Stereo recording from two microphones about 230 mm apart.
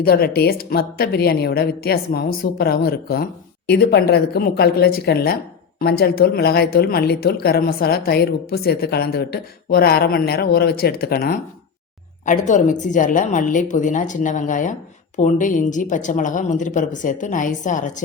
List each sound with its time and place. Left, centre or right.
0.0 s a woman's voice: left